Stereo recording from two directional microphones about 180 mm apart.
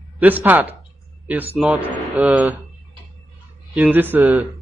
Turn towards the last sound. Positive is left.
turn(degrees=-10)  # may be behind; listen again after turning